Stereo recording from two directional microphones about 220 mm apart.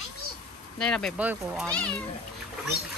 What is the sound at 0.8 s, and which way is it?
Speech, 5° left (ahead or behind).